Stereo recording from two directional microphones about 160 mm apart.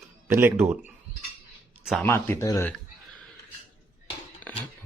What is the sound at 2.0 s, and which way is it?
Speech, 15° left (ahead or behind).